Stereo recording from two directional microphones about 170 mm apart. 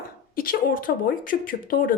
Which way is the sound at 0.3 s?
55° left (ahead or behind).